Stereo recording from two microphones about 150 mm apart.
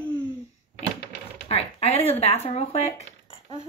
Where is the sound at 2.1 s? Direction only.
45° left (ahead or behind).